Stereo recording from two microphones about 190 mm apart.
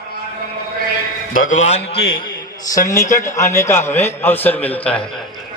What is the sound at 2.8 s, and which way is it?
A man's voice, 15° left (ahead or behind).